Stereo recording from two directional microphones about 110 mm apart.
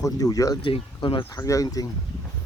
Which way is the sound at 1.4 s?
30° left (ahead or behind).